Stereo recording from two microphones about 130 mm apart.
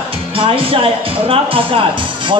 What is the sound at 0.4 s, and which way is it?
Speech, 45° right (ahead or behind).